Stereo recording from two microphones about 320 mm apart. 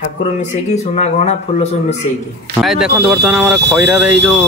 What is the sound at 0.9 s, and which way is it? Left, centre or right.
Speech, left.